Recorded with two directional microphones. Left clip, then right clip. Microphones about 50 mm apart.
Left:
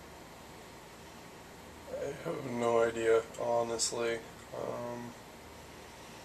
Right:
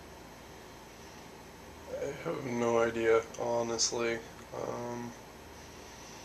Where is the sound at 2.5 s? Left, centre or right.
Right.